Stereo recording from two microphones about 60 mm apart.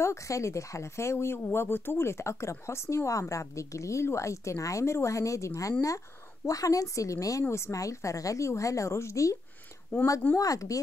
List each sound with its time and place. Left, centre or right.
0.0 s speech: left
7.4 s speech: left
9.9 s speech: left
10.3 s speech: left